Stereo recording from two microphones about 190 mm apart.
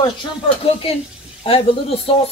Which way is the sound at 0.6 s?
30° left (ahead or behind).